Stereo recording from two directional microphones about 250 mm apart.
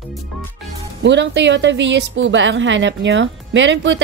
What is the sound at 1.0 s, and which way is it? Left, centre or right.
A woman's voice, right.